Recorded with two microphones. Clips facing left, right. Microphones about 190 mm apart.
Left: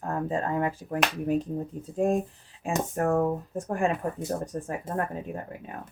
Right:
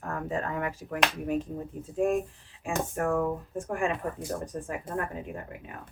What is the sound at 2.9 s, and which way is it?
Speech, 35° left (ahead or behind).